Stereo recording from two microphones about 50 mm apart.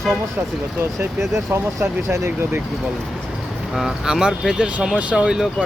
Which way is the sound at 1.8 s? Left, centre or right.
Right.